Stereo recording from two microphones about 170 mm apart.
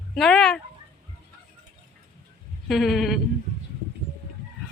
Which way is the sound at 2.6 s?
Centre (ahead or behind).